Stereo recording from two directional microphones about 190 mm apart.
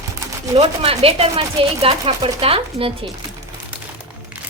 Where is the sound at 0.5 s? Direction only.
35° right (ahead or behind).